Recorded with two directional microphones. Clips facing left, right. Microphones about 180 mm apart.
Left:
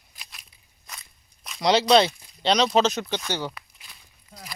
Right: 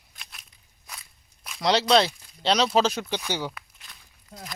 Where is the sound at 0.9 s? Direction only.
5° right (ahead or behind).